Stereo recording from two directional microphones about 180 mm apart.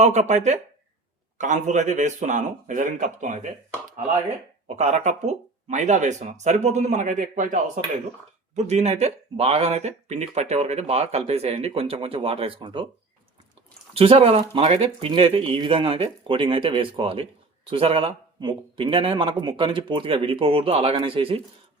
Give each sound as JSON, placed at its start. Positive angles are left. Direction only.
{"t": 0.0, "sound": "speech", "side_deg": -40}
{"t": 4.8, "sound": "speech", "side_deg": -40}
{"t": 13.9, "sound": "speech", "side_deg": -30}